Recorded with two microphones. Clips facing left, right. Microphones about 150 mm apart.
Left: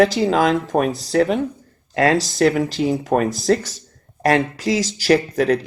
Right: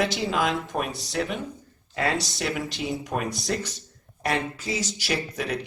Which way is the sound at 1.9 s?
90° left.